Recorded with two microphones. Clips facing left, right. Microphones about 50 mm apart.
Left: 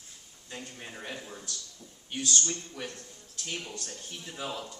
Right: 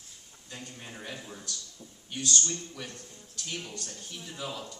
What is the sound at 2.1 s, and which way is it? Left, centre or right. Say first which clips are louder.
A man's voice: even; left.